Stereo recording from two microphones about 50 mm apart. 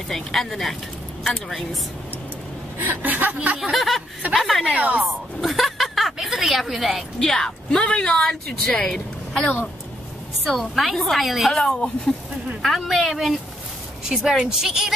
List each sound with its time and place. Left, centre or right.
0.1 s a woman's voice: centre
2.8 s speech: right
3.3 s a sound: right
3.7 s a woman's voice: centre
7.2 s a woman's voice: centre
10.4 s a woman's voice: centre
11.6 s speech: centre
12.6 s a woman's voice: centre
14.0 s a woman's voice: centre